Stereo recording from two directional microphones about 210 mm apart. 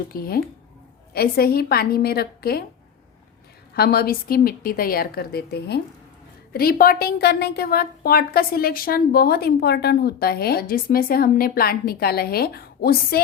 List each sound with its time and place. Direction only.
0.1 s a woman's voice: 45° left (ahead or behind)
3.8 s a woman's voice: 45° left (ahead or behind)